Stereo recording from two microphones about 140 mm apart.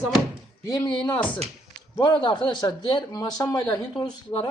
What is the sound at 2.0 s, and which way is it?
Speech, 35° left (ahead or behind).